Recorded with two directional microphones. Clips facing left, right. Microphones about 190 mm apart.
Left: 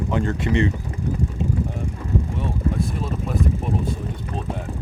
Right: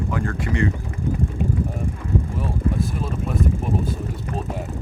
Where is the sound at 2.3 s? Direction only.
Centre (ahead or behind).